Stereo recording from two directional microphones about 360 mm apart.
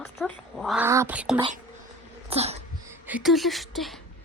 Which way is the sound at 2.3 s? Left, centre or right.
Centre.